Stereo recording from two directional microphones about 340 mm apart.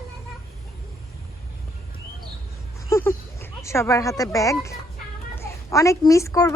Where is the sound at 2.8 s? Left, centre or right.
Centre.